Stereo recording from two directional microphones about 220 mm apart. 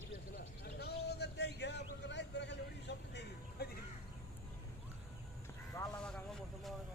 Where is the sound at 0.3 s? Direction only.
45° left (ahead or behind).